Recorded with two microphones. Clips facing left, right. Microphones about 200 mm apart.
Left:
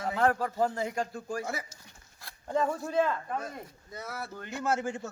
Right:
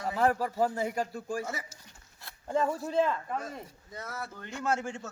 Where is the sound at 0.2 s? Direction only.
5° right (ahead or behind).